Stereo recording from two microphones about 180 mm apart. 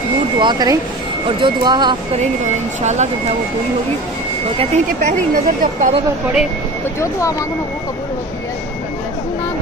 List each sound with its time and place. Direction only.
0.4 s speech: 25° right (ahead or behind)
2.1 s speech: 40° right (ahead or behind)
4.6 s speech: 40° right (ahead or behind)
7.0 s speech: 15° left (ahead or behind)